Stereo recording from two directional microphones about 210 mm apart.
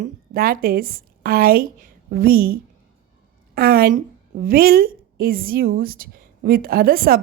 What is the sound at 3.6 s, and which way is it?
A woman's voice, 45° right (ahead or behind).